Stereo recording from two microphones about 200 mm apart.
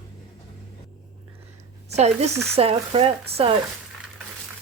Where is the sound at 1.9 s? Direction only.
35° right (ahead or behind).